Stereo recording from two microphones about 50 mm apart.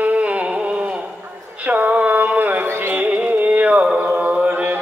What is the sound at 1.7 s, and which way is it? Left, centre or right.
Music, right.